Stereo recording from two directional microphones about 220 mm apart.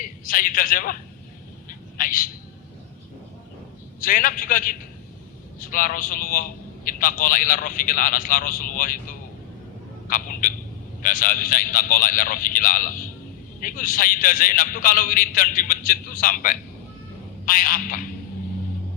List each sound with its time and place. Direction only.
0.0 s a man's voice: 40° left (ahead or behind)
2.0 s a sound: 40° left (ahead or behind)
4.0 s a man's voice: 40° left (ahead or behind)